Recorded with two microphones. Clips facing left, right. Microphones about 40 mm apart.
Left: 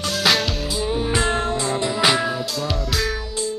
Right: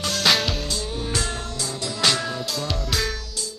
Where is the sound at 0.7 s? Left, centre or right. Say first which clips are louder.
Left 6 dB; centre.